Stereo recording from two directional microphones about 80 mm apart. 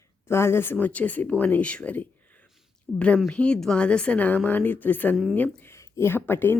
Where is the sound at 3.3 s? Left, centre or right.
Centre.